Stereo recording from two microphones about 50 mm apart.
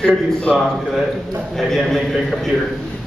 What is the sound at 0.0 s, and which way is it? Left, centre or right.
Speech, left.